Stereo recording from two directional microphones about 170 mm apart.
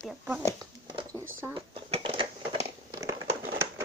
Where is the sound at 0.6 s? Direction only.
25° right (ahead or behind).